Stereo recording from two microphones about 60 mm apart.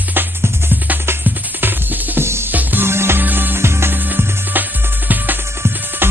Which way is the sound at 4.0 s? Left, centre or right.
Right.